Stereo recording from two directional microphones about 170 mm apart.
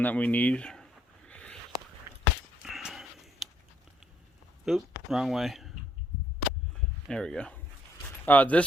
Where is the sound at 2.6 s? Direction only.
Centre (ahead or behind).